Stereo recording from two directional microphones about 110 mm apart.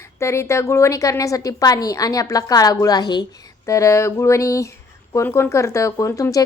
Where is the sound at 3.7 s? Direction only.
30° left (ahead or behind).